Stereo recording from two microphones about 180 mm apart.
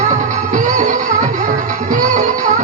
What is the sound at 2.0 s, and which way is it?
Music, 45° right (ahead or behind).